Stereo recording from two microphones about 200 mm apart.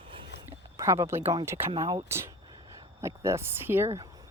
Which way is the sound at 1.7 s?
25° right (ahead or behind).